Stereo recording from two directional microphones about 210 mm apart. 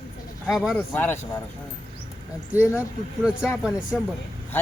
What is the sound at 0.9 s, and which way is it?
Speech, 10° left (ahead or behind).